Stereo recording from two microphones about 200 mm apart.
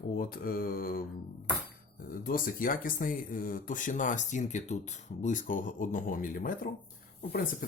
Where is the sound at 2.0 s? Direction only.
45° left (ahead or behind).